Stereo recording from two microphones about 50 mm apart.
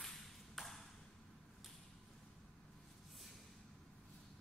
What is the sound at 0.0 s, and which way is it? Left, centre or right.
Ping, centre.